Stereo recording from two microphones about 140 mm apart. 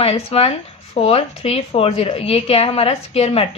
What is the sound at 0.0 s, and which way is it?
A woman's voice, 45° left (ahead or behind).